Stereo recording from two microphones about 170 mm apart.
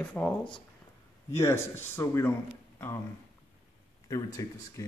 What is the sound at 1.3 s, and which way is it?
Speech, 15° left (ahead or behind).